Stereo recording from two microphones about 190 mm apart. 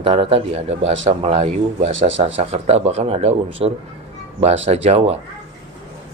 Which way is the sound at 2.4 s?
35° right (ahead or behind).